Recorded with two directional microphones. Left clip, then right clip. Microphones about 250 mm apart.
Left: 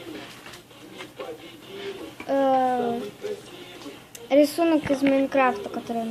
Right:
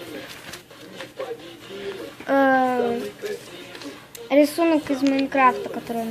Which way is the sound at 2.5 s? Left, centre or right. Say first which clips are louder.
Right 2 dB; centre.